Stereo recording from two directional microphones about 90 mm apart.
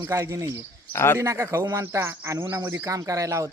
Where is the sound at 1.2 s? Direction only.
30° right (ahead or behind).